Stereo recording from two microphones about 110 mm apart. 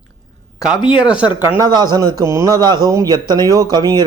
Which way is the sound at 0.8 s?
45° left (ahead or behind).